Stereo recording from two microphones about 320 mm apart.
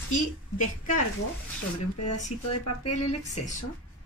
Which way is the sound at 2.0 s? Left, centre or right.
Left.